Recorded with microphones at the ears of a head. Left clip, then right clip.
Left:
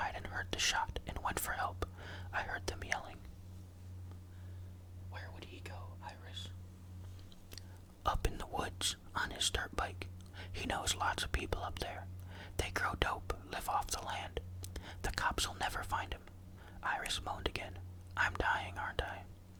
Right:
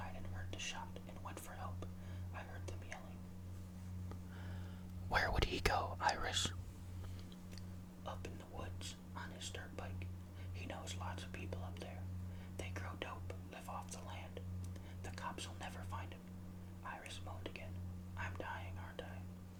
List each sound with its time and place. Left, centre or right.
0.0 s whispering: left
5.1 s whispering: right
8.0 s whispering: left
10.5 s speech: left